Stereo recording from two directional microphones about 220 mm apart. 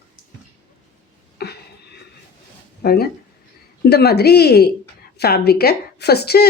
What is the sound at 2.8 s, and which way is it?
A woman's voice, 45° left (ahead or behind).